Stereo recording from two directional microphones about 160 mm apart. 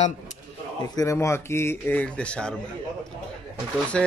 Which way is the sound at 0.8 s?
20° left (ahead or behind).